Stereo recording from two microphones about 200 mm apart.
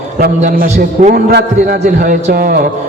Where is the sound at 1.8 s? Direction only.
40° right (ahead or behind).